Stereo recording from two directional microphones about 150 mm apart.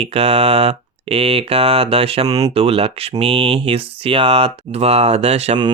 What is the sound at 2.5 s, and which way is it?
Speech, 40° right (ahead or behind).